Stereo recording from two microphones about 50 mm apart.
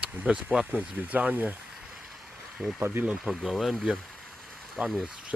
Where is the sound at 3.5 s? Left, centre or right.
Centre.